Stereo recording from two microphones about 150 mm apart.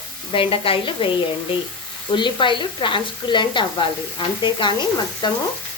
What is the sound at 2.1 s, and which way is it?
Sizzle, 30° left (ahead or behind).